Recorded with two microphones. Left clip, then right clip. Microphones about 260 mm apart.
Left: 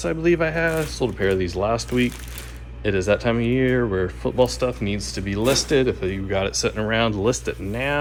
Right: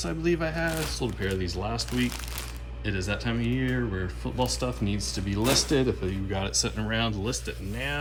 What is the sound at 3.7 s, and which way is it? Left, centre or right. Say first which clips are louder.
Speech: left 10 dB; centre.